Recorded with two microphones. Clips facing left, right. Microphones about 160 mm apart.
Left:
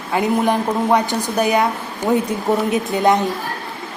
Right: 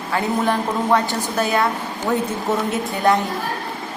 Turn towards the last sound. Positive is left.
turn(degrees=20)  # may be behind; listen again after turning